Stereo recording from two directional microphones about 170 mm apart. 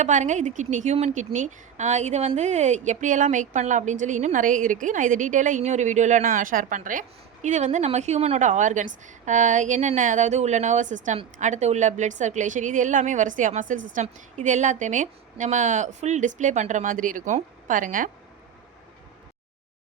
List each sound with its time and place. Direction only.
0.0 s a woman's voice: 45° right (ahead or behind)